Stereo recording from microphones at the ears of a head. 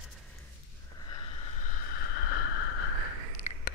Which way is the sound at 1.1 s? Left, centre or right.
Left.